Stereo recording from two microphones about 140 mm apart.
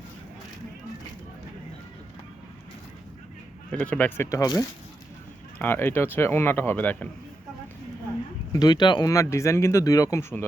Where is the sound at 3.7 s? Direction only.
10° left (ahead or behind).